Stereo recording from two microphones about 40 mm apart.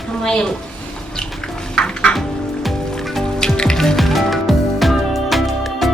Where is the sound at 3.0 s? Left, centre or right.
Centre.